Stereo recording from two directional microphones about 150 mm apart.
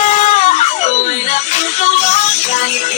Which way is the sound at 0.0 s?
50° left (ahead or behind).